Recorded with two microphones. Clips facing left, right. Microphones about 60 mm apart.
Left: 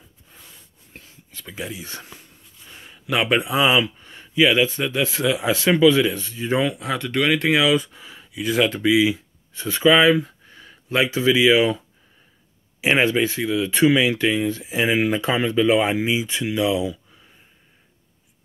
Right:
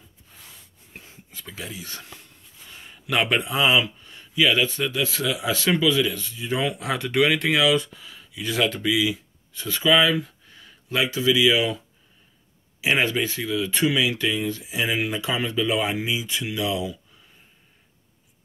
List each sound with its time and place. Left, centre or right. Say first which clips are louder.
1.5 s speech: left 5 dB; centre
1.8 s speech: left 2 dB; left
2.8 s a sound: left 1 dB; centre
3.3 s speech: left 3 dB; centre
4.0 s speech: left 4 dB; left
5.9 s speech: left 5 dB; left
6.8 s speech: right 1 dB; centre
7.9 s a sound: left 2 dB; left
8.4 s speech: left 4 dB; centre
8.8 s speech: left 5 dB; left
12.8 s speech: left 4 dB; left